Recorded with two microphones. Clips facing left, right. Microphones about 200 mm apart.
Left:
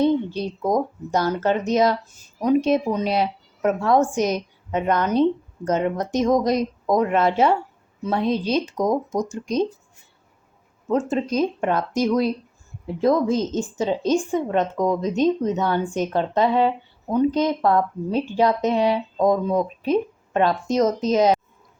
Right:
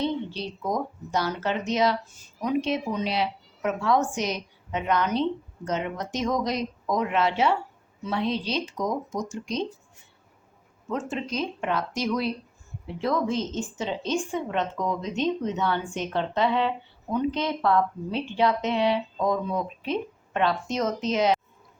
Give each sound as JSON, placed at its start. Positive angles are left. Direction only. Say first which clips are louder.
{"t": 0.0, "sound": "a woman's voice", "louder": "left 8 dB", "side_deg": 50}
{"t": 10.8, "sound": "a woman's voice", "louder": "left 8 dB", "side_deg": 40}